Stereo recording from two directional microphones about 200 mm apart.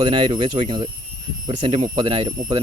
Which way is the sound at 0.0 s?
25° right (ahead or behind).